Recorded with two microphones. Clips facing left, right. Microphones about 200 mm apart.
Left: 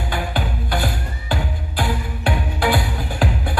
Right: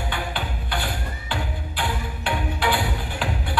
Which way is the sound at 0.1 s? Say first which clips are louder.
Left 5 dB; 40° left (ahead or behind).